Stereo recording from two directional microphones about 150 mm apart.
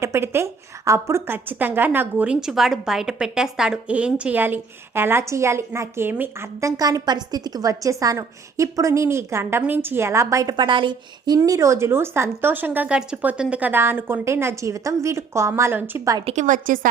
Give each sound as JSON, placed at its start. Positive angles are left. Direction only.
{"t": 0.0, "sound": "a woman's voice", "side_deg": -15}
{"t": 16.2, "sound": "a woman's voice", "side_deg": -50}